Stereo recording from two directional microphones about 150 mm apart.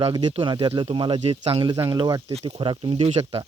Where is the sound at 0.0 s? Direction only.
30° right (ahead or behind).